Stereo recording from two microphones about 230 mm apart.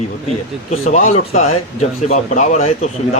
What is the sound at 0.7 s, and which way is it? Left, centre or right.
Speech, left.